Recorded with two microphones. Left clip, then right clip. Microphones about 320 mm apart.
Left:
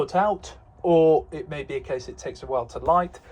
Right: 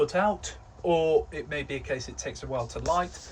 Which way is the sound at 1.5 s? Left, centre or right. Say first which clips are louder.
Left 3 dB; centre.